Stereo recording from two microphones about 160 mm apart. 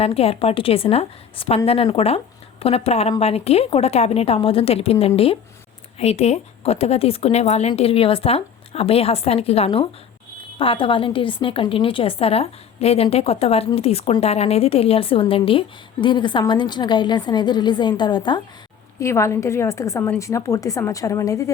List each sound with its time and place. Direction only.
0.0 s a woman's voice: 40° left (ahead or behind)
18.9 s a woman's voice: 20° left (ahead or behind)